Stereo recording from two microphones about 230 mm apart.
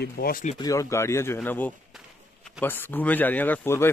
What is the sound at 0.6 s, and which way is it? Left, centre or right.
Speech, centre.